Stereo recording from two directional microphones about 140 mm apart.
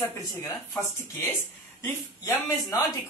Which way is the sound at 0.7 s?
15° left (ahead or behind).